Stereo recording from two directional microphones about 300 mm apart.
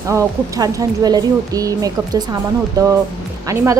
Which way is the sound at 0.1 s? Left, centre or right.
Centre.